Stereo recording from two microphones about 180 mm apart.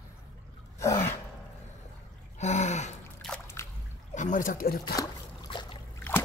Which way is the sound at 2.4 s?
40° left (ahead or behind).